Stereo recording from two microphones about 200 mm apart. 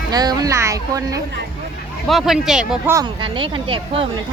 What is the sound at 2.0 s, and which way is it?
Speech, centre (ahead or behind).